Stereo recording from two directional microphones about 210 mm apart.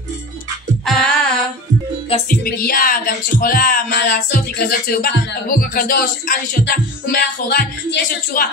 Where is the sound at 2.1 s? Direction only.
30° left (ahead or behind).